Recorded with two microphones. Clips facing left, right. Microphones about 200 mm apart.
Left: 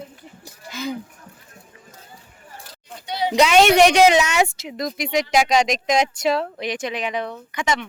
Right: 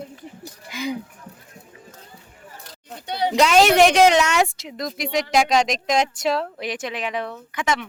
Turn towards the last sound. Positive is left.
turn(degrees=0)  # may be behind; listen again after turning